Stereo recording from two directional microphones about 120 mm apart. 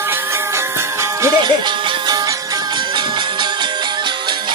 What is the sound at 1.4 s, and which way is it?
Music, 40° right (ahead or behind).